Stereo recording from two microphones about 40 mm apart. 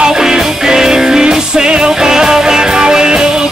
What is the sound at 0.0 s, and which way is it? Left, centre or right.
Music, centre.